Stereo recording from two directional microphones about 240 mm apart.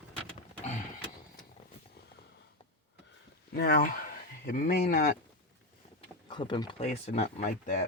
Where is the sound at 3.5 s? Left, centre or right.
Left.